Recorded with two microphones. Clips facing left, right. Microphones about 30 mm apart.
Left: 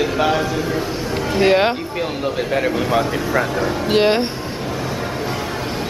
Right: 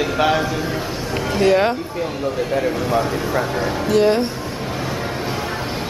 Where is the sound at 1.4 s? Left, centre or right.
Left.